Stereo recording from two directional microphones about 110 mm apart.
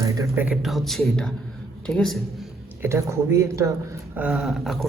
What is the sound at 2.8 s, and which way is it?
Speech, 25° right (ahead or behind).